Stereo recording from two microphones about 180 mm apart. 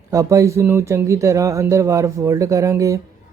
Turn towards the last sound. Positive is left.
turn(degrees=-15)  # may be behind; listen again after turning